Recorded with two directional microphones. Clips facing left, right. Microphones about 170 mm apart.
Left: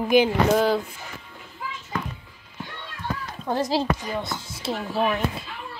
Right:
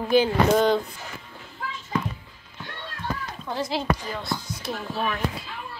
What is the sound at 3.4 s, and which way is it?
Speech, 45° left (ahead or behind).